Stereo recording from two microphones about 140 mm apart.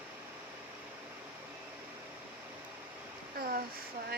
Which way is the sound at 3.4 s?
90° right.